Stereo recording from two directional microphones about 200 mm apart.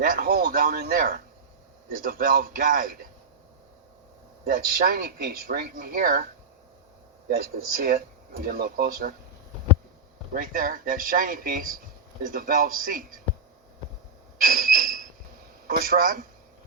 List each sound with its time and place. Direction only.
0.0 s speech: 45° right (ahead or behind)
4.4 s speech: 50° right (ahead or behind)
7.8 s speech: 50° right (ahead or behind)
10.3 s speech: 45° right (ahead or behind)
14.4 s a sound: 45° right (ahead or behind)
15.6 s speech: 45° right (ahead or behind)